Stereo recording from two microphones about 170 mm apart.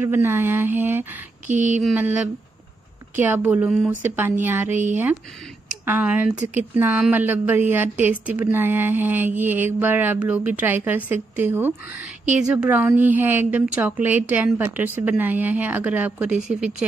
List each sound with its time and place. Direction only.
0.0 s a woman's voice: 15° right (ahead or behind)
1.5 s a sound: 45° right (ahead or behind)
2.0 s a woman's voice: 10° right (ahead or behind)
5.9 s a woman's voice: 10° right (ahead or behind)